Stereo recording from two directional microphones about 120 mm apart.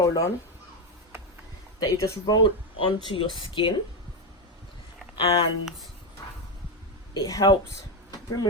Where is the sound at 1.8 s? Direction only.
35° left (ahead or behind).